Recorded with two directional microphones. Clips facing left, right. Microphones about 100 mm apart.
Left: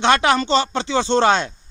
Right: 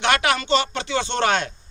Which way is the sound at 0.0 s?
30° left (ahead or behind).